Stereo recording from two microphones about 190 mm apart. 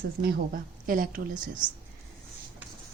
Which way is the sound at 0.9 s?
45° right (ahead or behind).